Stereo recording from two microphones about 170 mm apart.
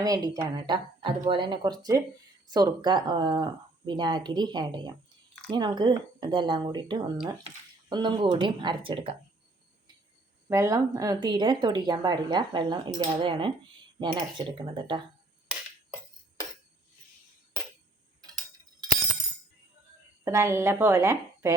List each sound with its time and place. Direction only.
0.0 s speech: 20° right (ahead or behind)
10.5 s speech: 20° right (ahead or behind)
20.2 s a woman's voice: 15° right (ahead or behind)